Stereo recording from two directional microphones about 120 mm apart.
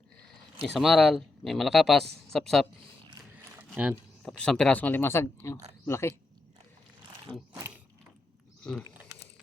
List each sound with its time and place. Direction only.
0.6 s speech: centre (ahead or behind)
3.6 s a sound: 10° right (ahead or behind)
4.2 s speech: 5° left (ahead or behind); by 6.1 s 20° left (ahead or behind)
8.7 s speech: 5° left (ahead or behind)